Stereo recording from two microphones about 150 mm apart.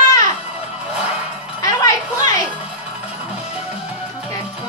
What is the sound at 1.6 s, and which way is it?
Music, 25° left (ahead or behind).